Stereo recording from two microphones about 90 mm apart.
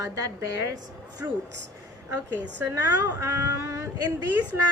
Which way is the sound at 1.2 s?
25° right (ahead or behind).